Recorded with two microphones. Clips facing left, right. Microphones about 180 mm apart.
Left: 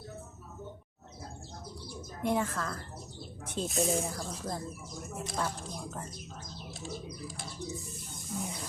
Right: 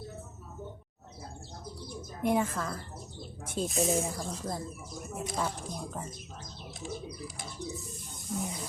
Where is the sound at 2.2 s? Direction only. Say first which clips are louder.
Right 2 dB; 15° right (ahead or behind).